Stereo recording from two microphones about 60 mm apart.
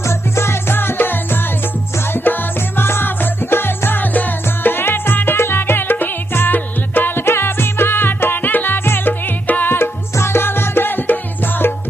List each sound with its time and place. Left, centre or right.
0.0 s music: left
9.7 s music: left